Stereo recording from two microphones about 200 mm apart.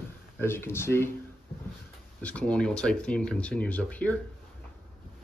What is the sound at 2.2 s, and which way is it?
Speech, 5° left (ahead or behind).